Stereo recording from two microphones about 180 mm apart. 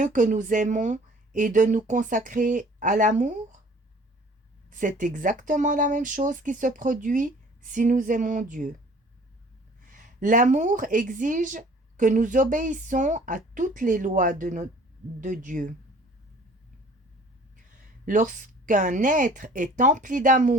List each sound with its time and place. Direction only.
0.0 s a woman's voice: 45° right (ahead or behind)
4.7 s a woman's voice: 45° right (ahead or behind)
9.8 s a woman's voice: 45° right (ahead or behind)
18.0 s a woman's voice: 45° right (ahead or behind)